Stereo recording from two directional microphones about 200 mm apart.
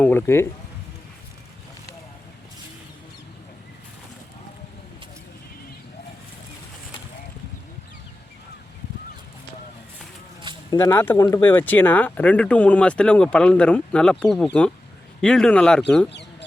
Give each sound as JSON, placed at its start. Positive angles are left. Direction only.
{"t": 0.0, "sound": "speech", "side_deg": 10}
{"t": 10.7, "sound": "speech", "side_deg": 20}